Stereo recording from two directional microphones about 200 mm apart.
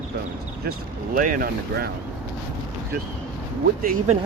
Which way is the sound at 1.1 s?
45° right (ahead or behind).